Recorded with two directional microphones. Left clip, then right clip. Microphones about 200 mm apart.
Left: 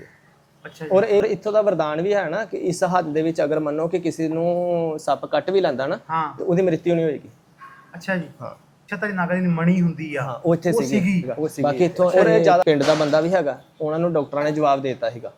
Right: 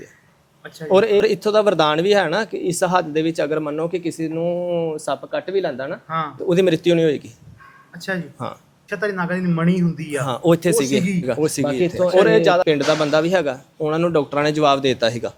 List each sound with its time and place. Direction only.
0.6 s speech: 50° right (ahead or behind)
0.9 s speech: 25° right (ahead or behind); by 6.0 s 5° right (ahead or behind)
6.1 s a man's voice: 55° right (ahead or behind)
6.5 s speech: 30° right (ahead or behind)
7.9 s speech: 50° right (ahead or behind)
8.9 s a man's voice: 60° right (ahead or behind)
10.2 s speech: 30° right (ahead or behind)
11.0 s speech: 40° right (ahead or behind)
11.6 s speech: 15° right (ahead or behind); by 15.3 s 40° right (ahead or behind)